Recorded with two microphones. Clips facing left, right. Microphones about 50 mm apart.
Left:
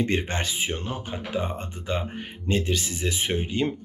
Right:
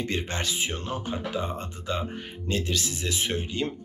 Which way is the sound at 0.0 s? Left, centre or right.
Left.